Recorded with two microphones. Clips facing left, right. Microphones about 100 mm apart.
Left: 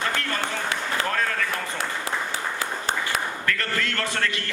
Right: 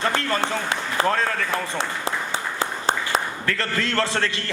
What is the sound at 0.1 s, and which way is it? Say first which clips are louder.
Speech: right 4 dB; 30° right (ahead or behind).